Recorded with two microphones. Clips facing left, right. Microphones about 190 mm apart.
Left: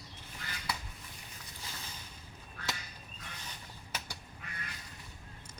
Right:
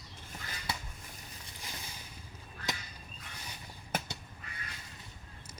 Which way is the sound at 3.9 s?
50° right (ahead or behind).